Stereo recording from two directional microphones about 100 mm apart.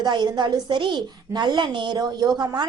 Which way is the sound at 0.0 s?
50° right (ahead or behind).